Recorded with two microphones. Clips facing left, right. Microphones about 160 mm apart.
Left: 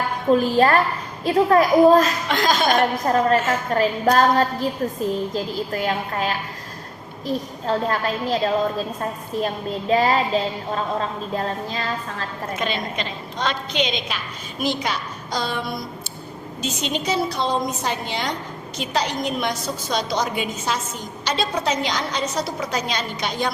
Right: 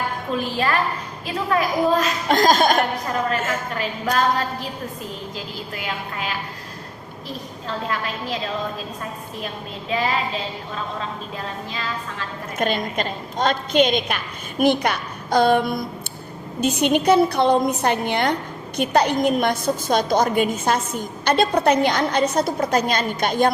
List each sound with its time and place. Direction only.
0.3 s a woman's voice: 40° left (ahead or behind)
2.2 s a woman's voice: 45° right (ahead or behind)
3.0 s a woman's voice: 40° left (ahead or behind)
9.9 s a woman's voice: 40° left (ahead or behind)
12.5 s a woman's voice: 50° right (ahead or behind)